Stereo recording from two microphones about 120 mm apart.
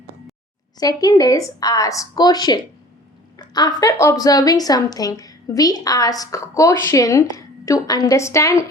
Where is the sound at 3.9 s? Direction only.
25° left (ahead or behind).